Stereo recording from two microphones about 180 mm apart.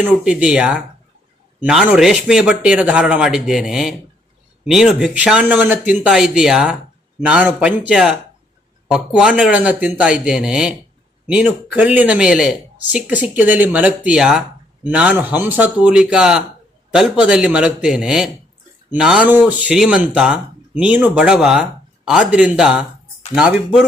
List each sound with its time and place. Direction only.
0.1 s speech: 5° right (ahead or behind)